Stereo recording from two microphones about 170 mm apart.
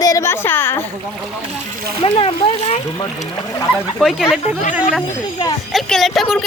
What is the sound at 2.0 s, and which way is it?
Speech, 30° left (ahead or behind).